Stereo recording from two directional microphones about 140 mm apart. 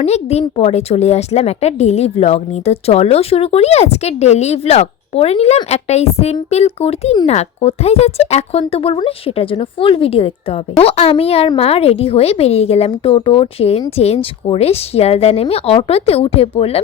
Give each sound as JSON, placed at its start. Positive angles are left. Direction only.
{"t": 0.0, "sound": "speech", "side_deg": 50}